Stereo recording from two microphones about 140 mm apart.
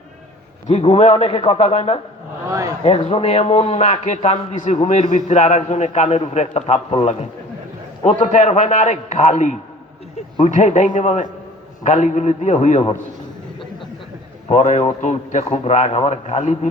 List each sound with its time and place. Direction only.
0.7 s a man's voice: 50° left (ahead or behind)
2.5 s speech: 25° right (ahead or behind)
2.8 s a man's voice: 45° left (ahead or behind)
14.5 s a man's voice: 55° left (ahead or behind)